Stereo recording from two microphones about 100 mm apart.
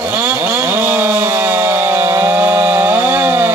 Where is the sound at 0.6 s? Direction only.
20° right (ahead or behind).